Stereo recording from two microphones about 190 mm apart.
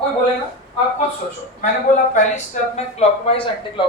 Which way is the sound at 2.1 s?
35° left (ahead or behind).